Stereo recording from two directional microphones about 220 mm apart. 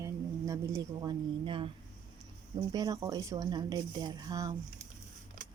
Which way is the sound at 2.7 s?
15° right (ahead or behind).